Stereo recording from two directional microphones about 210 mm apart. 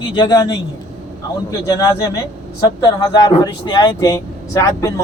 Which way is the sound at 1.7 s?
15° left (ahead or behind).